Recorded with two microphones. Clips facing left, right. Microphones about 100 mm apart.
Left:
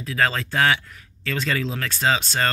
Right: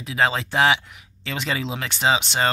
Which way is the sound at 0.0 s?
15° right (ahead or behind).